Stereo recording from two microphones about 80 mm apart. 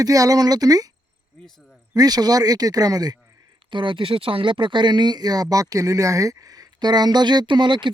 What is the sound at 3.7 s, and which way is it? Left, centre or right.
Speech, right.